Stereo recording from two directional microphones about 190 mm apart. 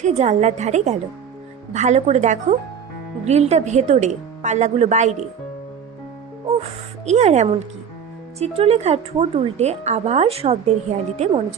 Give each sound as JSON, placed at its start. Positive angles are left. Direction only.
{"t": 0.0, "sound": "a woman's voice", "side_deg": -35}
{"t": 6.6, "sound": "a woman's voice", "side_deg": -35}